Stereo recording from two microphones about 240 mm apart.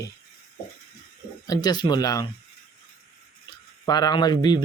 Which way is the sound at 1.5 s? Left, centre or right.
Centre.